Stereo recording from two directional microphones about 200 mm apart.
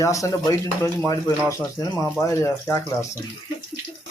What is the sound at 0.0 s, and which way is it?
Speech, 15° left (ahead or behind).